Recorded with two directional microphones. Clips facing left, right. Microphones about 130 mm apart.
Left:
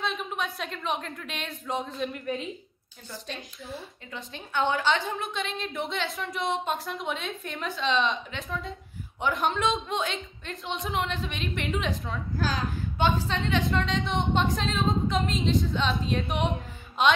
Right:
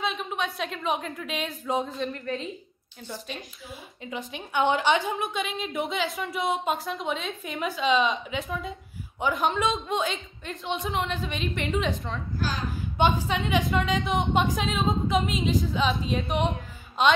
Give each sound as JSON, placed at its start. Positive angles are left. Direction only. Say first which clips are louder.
{"t": 0.0, "sound": "a woman's voice", "louder": "right 2 dB", "side_deg": 0}
{"t": 4.3, "sound": "a woman's voice", "louder": "right 3 dB", "side_deg": -20}
{"t": 5.3, "sound": "a woman's voice", "louder": "right 2 dB", "side_deg": -5}
{"t": 12.9, "sound": "a woman's voice", "louder": "right 3 dB", "side_deg": -20}
{"t": 13.7, "sound": "a woman's voice", "louder": "right 2 dB", "side_deg": -5}